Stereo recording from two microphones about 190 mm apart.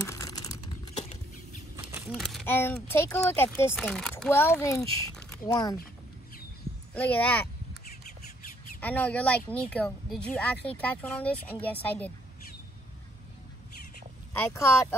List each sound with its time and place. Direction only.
0.0 s typing: 15° left (ahead or behind)
0.9 s patter: 35° left (ahead or behind)
1.8 s a sound: 10° right (ahead or behind)
2.1 s speech: centre (ahead or behind)
2.4 s speech: 10° left (ahead or behind)
6.9 s speech: 5° left (ahead or behind)
8.8 s speech: 10° left (ahead or behind)
14.5 s speech: 15° left (ahead or behind)